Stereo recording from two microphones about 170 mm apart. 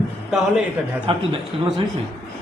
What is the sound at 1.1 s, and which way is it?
Speech, 30° right (ahead or behind).